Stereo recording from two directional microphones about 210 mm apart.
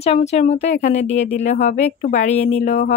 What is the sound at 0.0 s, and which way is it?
Speech, 30° left (ahead or behind).